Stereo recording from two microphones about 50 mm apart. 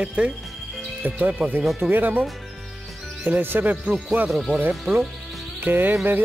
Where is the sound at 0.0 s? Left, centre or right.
Right.